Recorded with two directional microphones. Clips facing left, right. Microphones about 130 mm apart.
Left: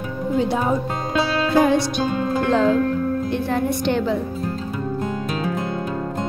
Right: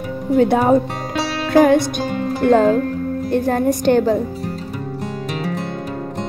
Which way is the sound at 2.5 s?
45° right (ahead or behind).